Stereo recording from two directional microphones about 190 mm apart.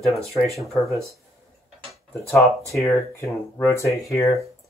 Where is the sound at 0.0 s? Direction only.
Centre (ahead or behind).